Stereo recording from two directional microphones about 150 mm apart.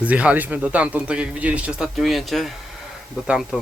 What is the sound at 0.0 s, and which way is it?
A man's voice, 10° right (ahead or behind).